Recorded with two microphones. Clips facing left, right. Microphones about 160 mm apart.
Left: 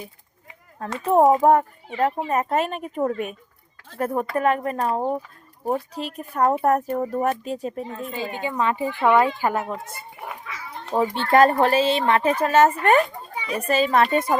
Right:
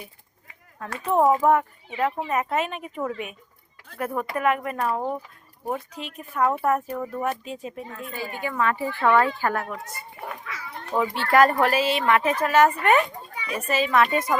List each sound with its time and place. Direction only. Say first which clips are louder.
0.8 s speech: left 4 dB; 35° left (ahead or behind)
8.1 s speech: left 1 dB; 20° left (ahead or behind)